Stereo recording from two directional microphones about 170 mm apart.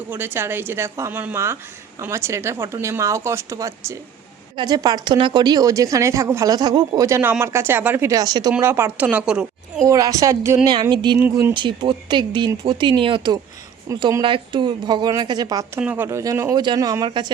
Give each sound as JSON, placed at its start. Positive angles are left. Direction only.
{"t": 0.1, "sound": "a woman's voice", "side_deg": -15}
{"t": 9.8, "sound": "a woman's voice", "side_deg": -20}
{"t": 15.8, "sound": "a woman's voice", "side_deg": -10}